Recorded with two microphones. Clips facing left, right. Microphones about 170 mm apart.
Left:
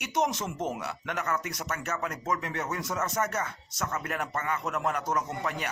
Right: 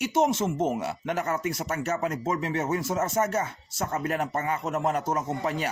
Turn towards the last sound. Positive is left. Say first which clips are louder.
# right 4 dB
turn(degrees=-30)  # may be behind; listen again after turning